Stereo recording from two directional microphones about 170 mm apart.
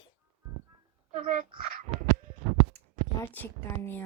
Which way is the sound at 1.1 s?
50° right (ahead or behind).